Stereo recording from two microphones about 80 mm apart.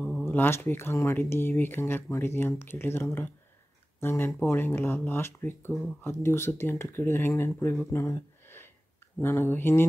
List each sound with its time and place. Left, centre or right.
0.2 s speech: left
7.9 s a sound: left
9.2 s speech: left